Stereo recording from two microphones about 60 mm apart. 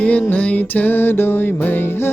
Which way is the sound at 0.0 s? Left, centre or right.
Left.